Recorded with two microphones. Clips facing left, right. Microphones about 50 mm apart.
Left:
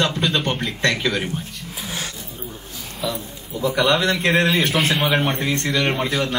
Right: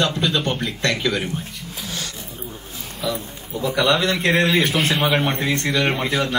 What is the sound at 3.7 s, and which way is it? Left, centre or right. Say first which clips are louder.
Speech: left 1 dB; left.